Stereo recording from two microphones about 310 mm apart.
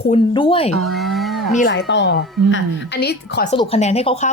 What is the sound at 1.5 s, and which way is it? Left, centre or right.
A woman's voice, left.